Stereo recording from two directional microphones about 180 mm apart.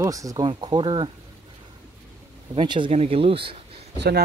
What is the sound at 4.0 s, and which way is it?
Speech, 65° right (ahead or behind).